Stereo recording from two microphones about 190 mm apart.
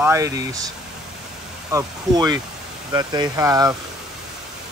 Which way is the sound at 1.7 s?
20° right (ahead or behind).